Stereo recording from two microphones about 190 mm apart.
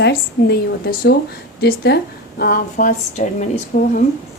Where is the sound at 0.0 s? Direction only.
55° left (ahead or behind).